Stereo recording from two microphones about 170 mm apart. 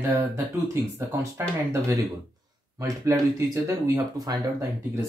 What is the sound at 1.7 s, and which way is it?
Speech, 15° right (ahead or behind).